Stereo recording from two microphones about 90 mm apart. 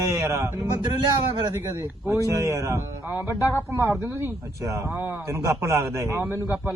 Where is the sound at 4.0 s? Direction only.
30° right (ahead or behind).